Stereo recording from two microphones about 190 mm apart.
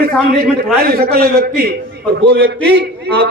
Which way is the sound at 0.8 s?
55° right (ahead or behind).